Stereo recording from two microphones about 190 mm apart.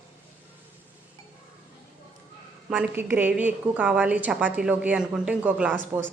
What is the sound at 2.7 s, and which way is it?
A woman's voice, 10° right (ahead or behind).